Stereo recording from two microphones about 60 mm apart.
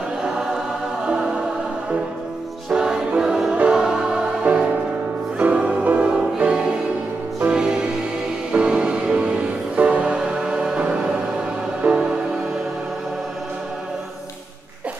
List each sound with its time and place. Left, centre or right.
1.0 s music: centre
2.7 s music: centre
5.4 s music: centre